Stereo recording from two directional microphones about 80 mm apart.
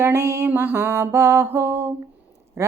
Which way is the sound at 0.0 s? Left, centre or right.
Right.